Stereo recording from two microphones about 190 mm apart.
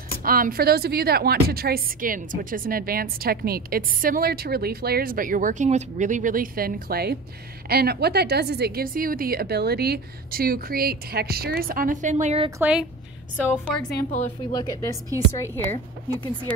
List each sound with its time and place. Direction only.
0.2 s a woman's voice: 50° right (ahead or behind)
12.4 s speech: 10° right (ahead or behind)
13.5 s a woman's voice: 5° left (ahead or behind)
14.5 s a woman's voice: 20° left (ahead or behind)